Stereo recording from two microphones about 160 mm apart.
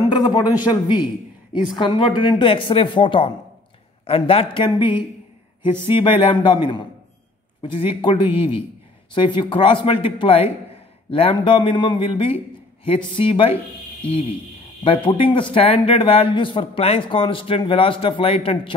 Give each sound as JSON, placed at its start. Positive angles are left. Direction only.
{"t": 0.1, "sound": "a man's voice", "side_deg": 25}
{"t": 14.8, "sound": "a man's voice", "side_deg": 35}